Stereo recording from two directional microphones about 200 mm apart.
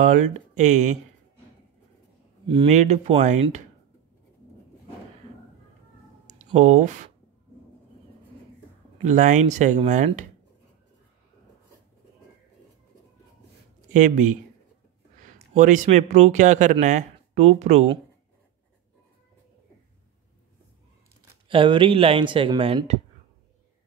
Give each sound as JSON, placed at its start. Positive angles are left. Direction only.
{"t": 0.0, "sound": "speech", "side_deg": -35}
{"t": 2.4, "sound": "speech", "side_deg": -25}
{"t": 6.2, "sound": "a sound", "side_deg": -35}
{"t": 9.0, "sound": "speech", "side_deg": -40}
{"t": 13.9, "sound": "speech", "side_deg": -40}
{"t": 21.5, "sound": "speech", "side_deg": -25}